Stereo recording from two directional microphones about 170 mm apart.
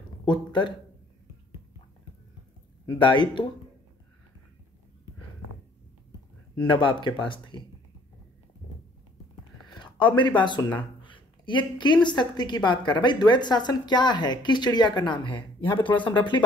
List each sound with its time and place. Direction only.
0.3 s a woman's voice: 25° left (ahead or behind)
3.0 s a woman's voice: 30° left (ahead or behind)
6.5 s a woman's voice: 25° left (ahead or behind)
9.8 s a woman's voice: 25° left (ahead or behind)